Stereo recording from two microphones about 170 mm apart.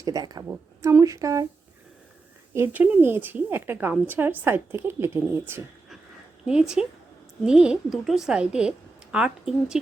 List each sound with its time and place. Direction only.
0.0 s a woman's voice: 20° right (ahead or behind)
2.5 s a woman's voice: 10° right (ahead or behind)